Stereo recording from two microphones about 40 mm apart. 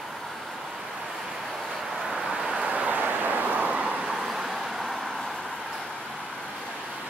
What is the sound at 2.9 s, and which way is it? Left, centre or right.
Vehicle, right.